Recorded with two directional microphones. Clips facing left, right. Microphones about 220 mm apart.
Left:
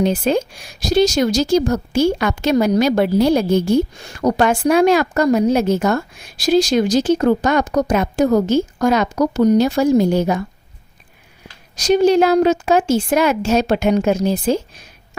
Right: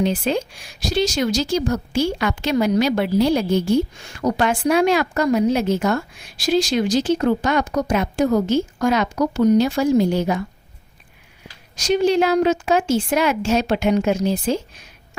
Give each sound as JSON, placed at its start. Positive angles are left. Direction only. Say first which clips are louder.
{"t": 0.0, "sound": "a woman's voice", "louder": "left 4 dB", "side_deg": 45}
{"t": 11.8, "sound": "a woman's voice", "louder": "left 4 dB", "side_deg": 40}